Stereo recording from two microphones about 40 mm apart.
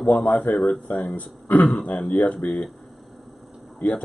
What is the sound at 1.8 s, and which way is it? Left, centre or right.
Speech, left.